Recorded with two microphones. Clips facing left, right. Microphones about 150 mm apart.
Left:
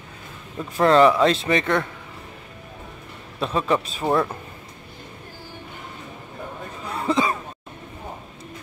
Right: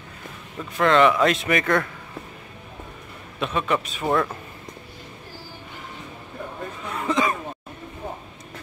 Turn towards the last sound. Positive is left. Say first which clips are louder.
# left 1 dB
turn(degrees=30)  # may be behind; listen again after turning